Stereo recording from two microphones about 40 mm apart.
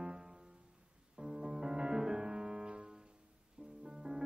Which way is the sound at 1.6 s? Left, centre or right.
Centre.